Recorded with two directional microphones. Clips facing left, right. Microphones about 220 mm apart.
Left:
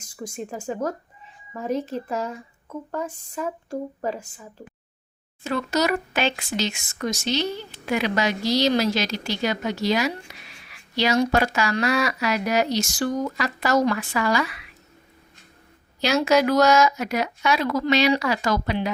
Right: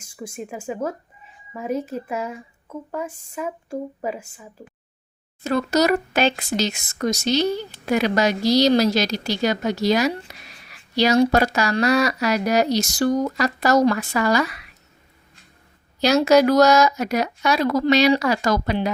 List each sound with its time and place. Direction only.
0.2 s speech: 10° right (ahead or behind)
5.4 s speech: 40° right (ahead or behind)
16.0 s speech: 40° right (ahead or behind)